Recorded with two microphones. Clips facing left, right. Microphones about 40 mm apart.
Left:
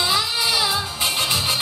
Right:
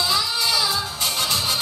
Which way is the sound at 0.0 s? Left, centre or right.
Left.